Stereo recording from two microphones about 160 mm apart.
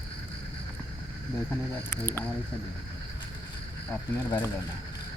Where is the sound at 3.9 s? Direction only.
10° left (ahead or behind).